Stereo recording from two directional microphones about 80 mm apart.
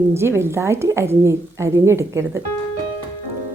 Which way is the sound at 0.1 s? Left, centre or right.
Right.